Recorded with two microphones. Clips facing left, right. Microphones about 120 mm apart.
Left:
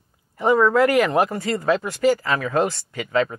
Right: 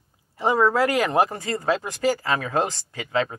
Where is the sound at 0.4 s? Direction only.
30° right (ahead or behind).